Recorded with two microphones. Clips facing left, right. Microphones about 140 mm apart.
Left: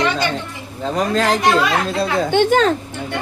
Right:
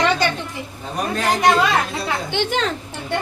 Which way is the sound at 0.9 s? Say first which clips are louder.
Left 4 dB; 90° left.